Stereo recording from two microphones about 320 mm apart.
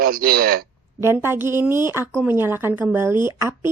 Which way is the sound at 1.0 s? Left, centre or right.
Centre.